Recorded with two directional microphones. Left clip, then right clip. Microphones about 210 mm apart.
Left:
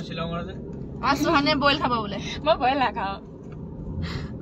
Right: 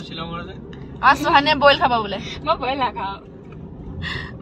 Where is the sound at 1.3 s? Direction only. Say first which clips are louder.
Right 6 dB; 35° right (ahead or behind).